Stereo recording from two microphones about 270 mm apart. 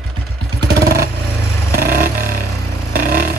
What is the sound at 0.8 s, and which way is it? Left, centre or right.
Vehicle, right.